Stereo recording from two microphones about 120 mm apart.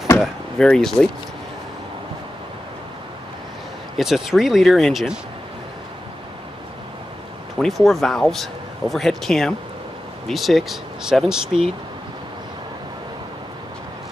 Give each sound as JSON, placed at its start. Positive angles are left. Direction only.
{"t": 0.2, "sound": "speech", "side_deg": 5}
{"t": 4.0, "sound": "speech", "side_deg": 0}
{"t": 7.5, "sound": "speech", "side_deg": 0}